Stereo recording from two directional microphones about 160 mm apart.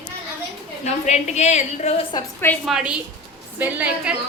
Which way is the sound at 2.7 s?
5° right (ahead or behind).